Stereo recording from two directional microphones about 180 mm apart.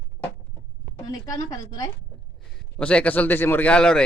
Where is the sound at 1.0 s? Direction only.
20° left (ahead or behind).